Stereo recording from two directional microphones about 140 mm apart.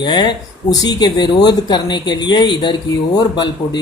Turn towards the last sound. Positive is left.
turn(degrees=30)  # may be behind; listen again after turning